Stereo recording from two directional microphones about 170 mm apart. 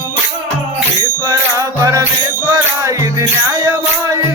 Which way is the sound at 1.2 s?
20° right (ahead or behind).